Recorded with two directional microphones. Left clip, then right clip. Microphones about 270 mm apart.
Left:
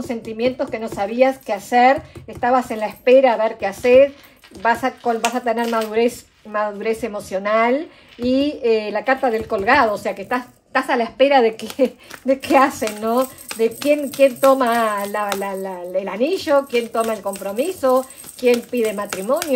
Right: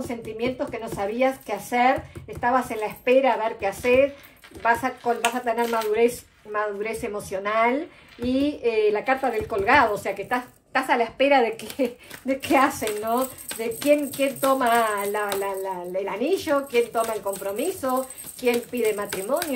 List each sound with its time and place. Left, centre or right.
0.1 s speech: left